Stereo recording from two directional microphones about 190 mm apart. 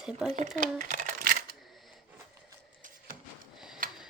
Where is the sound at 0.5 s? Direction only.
40° right (ahead or behind).